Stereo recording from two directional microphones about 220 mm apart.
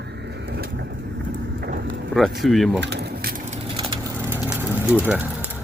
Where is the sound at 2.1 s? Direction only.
Centre (ahead or behind).